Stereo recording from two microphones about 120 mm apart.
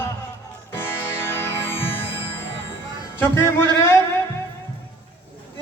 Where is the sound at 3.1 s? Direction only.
20° left (ahead or behind).